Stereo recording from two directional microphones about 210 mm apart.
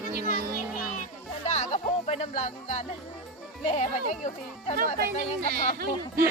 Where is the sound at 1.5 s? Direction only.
30° left (ahead or behind).